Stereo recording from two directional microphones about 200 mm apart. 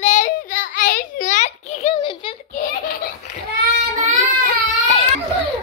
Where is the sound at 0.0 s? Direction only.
35° left (ahead or behind).